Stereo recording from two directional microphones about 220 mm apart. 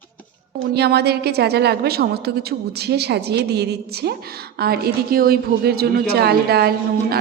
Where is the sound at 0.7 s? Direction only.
45° right (ahead or behind).